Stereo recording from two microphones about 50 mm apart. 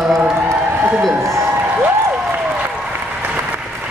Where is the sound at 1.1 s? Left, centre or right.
Right.